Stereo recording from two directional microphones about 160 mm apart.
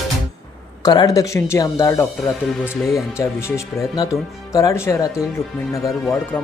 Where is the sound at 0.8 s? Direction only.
25° left (ahead or behind).